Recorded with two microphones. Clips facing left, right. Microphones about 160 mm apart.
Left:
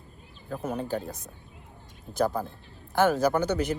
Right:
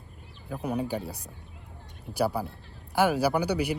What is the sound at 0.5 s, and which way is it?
Speech, 15° right (ahead or behind).